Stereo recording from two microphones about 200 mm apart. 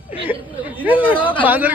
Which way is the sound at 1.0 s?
25° left (ahead or behind).